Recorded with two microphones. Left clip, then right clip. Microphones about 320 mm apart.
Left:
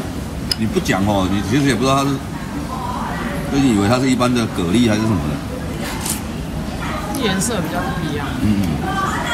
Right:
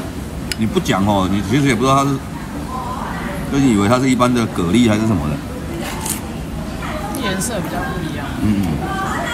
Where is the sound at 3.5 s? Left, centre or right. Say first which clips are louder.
Right 1 dB; centre.